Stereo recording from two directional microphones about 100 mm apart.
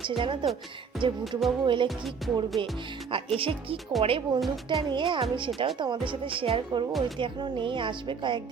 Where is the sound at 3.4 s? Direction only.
65° right (ahead or behind).